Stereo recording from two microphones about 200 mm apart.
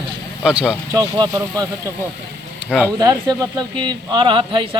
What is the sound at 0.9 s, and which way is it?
Speech, 20° right (ahead or behind).